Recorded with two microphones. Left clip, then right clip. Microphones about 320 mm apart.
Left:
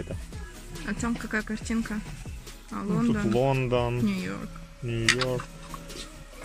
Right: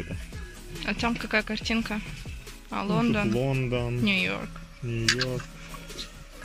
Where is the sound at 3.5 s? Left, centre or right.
Left.